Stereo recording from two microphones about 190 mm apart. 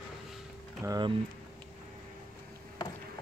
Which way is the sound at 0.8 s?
20° right (ahead or behind).